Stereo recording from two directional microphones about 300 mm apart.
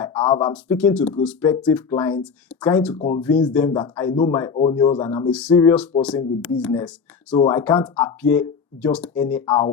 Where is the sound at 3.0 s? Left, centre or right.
Left.